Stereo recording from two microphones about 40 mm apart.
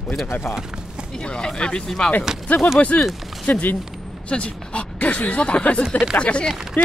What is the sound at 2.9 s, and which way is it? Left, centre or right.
Speech, left.